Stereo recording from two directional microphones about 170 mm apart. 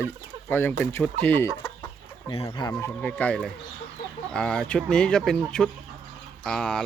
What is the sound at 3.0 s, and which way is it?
Speech, 5° left (ahead or behind).